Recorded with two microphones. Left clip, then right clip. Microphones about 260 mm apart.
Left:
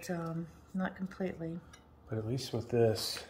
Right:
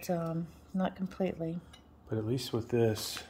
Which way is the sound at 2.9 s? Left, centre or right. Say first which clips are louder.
Left 1 dB; centre.